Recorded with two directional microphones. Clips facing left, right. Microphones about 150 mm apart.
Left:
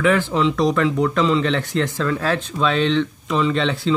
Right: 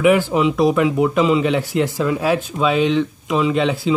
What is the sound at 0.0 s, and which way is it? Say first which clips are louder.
Speech: right 3 dB; 15° right (ahead or behind).